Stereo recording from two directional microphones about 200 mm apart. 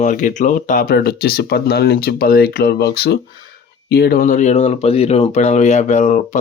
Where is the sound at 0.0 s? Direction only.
40° left (ahead or behind).